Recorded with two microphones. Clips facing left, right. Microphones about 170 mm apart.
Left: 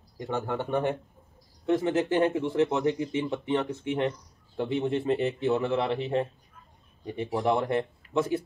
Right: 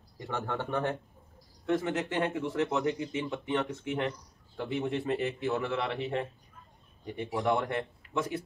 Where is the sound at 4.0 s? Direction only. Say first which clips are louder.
Left 4 dB; 25° left (ahead or behind).